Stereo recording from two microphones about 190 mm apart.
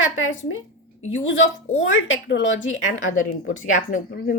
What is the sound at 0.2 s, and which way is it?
Speech, 90° left.